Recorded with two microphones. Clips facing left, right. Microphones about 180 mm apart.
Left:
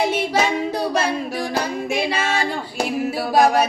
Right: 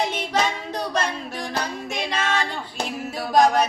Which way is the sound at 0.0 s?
10° left (ahead or behind).